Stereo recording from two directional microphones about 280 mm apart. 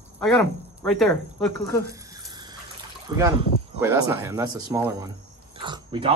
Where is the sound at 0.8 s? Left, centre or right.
Centre.